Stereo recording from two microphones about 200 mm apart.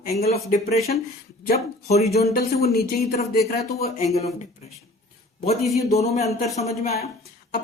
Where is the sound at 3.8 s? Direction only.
35° left (ahead or behind).